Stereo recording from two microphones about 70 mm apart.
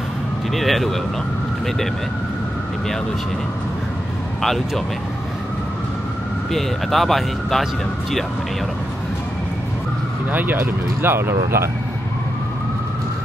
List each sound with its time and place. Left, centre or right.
0.6 s speech: centre
4.4 s speech: centre
6.5 s speech: centre
10.3 s speech: right